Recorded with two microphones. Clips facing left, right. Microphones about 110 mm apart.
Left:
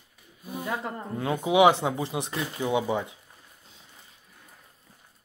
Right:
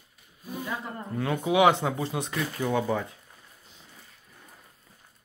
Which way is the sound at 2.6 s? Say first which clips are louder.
Left 1 dB; 15° left (ahead or behind).